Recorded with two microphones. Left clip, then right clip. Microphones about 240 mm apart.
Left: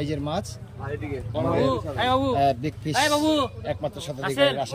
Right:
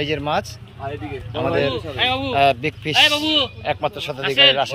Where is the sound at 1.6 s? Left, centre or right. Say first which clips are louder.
Right 4 dB; centre.